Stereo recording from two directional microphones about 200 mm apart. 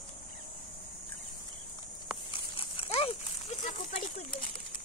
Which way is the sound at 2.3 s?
25° left (ahead or behind).